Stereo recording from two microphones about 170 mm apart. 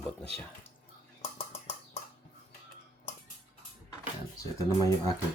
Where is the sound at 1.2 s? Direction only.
35° left (ahead or behind).